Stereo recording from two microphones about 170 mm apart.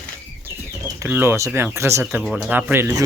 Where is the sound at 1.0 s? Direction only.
15° right (ahead or behind).